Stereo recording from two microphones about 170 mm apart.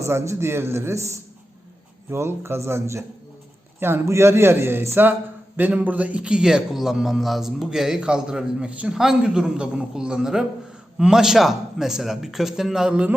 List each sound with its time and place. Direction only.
0.0 s a man's voice: 15° right (ahead or behind)